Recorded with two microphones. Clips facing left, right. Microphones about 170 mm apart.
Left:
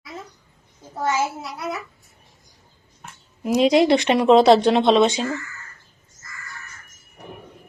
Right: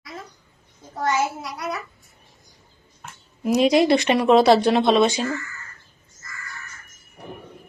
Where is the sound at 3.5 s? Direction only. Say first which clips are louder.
Left 1 dB; 15° left (ahead or behind).